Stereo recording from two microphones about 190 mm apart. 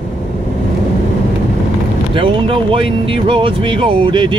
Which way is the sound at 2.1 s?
25° right (ahead or behind).